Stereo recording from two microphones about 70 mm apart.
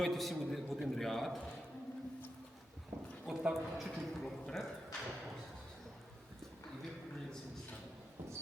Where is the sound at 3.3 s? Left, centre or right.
Centre.